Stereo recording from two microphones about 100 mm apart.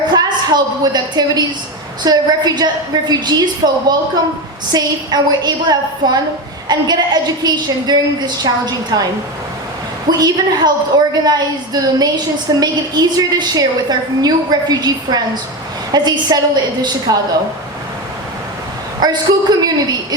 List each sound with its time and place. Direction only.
0.1 s a woman's voice: 45° right (ahead or behind)
10.1 s a woman's voice: 45° right (ahead or behind)
18.9 s a woman's voice: 45° right (ahead or behind)